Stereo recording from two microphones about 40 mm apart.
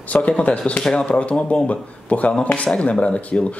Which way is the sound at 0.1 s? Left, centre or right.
Left.